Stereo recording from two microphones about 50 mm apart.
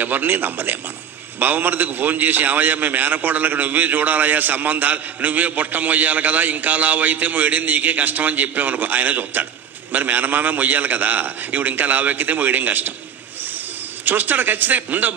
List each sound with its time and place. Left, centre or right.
0.0 s a man's voice: right
14.0 s a man's voice: right